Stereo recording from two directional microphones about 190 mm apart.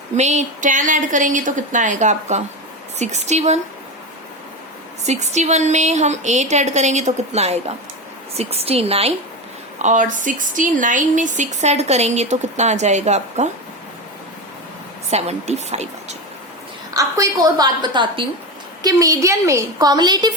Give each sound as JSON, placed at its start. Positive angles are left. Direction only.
{"t": 0.2, "sound": "speech", "side_deg": -35}
{"t": 5.0, "sound": "speech", "side_deg": -35}
{"t": 15.1, "sound": "speech", "side_deg": -35}
{"t": 16.9, "sound": "a woman's voice", "side_deg": -15}